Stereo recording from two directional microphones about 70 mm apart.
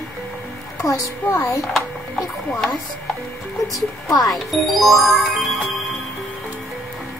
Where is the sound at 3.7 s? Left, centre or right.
Left.